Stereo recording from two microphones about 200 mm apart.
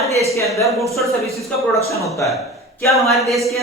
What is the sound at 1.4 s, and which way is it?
Speech, 15° left (ahead or behind).